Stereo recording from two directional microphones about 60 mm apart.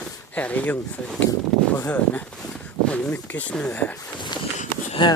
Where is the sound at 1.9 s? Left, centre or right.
Left.